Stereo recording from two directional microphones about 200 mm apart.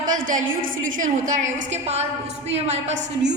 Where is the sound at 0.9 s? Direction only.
40° right (ahead or behind).